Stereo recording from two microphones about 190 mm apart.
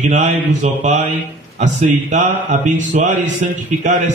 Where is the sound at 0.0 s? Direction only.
40° right (ahead or behind).